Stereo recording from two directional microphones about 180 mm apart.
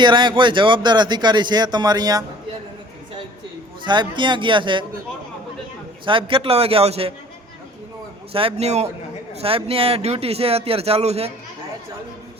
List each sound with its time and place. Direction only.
0.0 s a man's voice: 25° right (ahead or behind)
3.8 s a man's voice: 25° right (ahead or behind)
6.1 s speech: 30° right (ahead or behind)
8.3 s speech: 30° right (ahead or behind)